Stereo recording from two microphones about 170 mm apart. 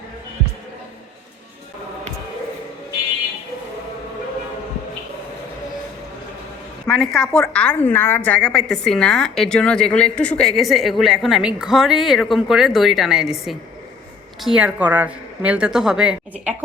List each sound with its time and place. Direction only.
6.8 s a woman's voice: 5° left (ahead or behind)